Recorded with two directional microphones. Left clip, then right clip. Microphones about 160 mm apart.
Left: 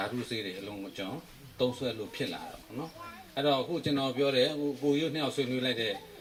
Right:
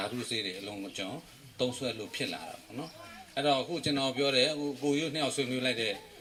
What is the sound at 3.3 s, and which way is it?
A man's voice, 35° left (ahead or behind).